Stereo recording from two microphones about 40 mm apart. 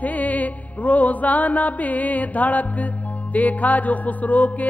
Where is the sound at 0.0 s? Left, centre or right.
Left.